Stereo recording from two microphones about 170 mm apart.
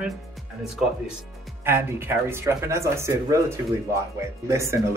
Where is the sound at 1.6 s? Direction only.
15° right (ahead or behind).